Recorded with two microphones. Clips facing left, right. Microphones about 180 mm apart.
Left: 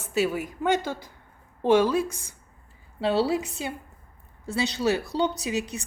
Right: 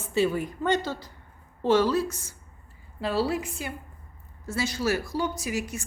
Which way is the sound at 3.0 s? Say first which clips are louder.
Left 3 dB; 25° left (ahead or behind).